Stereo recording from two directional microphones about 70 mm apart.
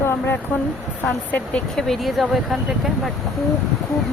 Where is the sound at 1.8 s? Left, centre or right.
Centre.